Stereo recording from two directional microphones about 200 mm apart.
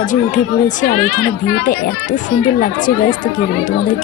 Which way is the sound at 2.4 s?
40° left (ahead or behind).